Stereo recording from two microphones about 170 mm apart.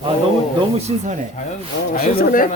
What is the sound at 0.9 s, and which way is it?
Speech, 35° right (ahead or behind).